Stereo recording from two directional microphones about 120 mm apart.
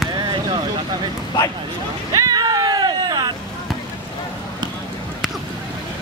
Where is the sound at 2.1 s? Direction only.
35° right (ahead or behind).